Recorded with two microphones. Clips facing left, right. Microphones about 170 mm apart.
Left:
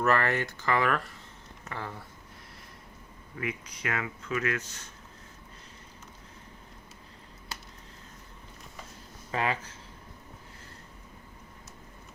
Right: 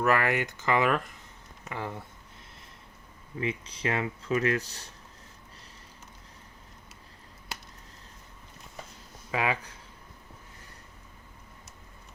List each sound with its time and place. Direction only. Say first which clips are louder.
0.0 s speech: right 1 dB; 10° right (ahead or behind)
3.3 s speech: right 3 dB; 25° right (ahead or behind)
9.3 s speech: right 1 dB; 10° right (ahead or behind)